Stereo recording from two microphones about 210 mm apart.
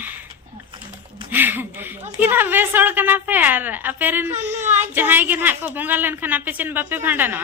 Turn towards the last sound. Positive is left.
turn(degrees=-10)  # may be behind; listen again after turning